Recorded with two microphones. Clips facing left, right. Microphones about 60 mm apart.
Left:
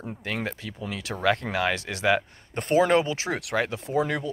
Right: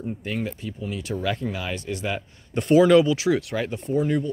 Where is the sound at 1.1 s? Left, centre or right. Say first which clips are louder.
Left 3 dB; left.